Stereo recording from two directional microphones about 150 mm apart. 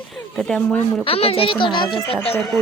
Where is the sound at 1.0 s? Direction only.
40° left (ahead or behind).